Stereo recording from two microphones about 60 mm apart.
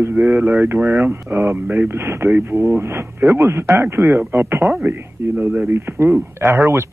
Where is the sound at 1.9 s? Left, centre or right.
Right.